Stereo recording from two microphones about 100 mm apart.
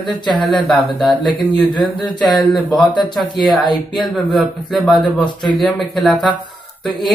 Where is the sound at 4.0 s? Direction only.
Centre (ahead or behind).